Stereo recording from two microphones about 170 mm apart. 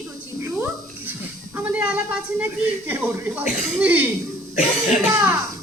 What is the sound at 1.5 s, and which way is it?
Speech, 10° right (ahead or behind).